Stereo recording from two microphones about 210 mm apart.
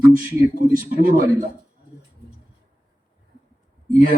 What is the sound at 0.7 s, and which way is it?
Speech, 45° right (ahead or behind).